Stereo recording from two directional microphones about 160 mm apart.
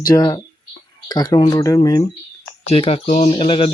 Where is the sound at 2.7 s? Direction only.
40° left (ahead or behind).